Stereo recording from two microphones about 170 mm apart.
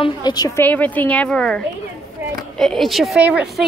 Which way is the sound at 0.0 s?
25° left (ahead or behind).